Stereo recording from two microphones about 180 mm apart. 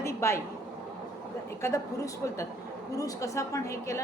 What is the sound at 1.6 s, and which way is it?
Speech, 15° left (ahead or behind).